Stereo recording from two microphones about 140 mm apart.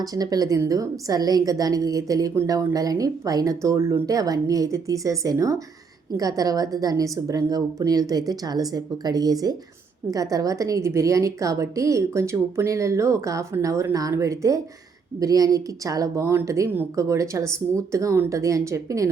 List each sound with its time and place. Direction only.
0.0 s a woman's voice: 25° right (ahead or behind)